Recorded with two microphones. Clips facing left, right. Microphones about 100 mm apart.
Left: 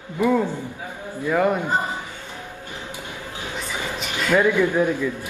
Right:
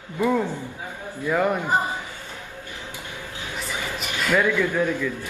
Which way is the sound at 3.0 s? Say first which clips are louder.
Left 2 dB; 15° left (ahead or behind).